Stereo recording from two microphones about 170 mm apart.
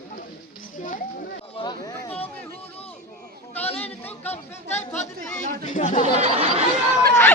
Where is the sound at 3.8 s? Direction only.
10° left (ahead or behind).